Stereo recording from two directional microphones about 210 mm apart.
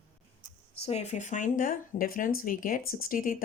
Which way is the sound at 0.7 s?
30° left (ahead or behind).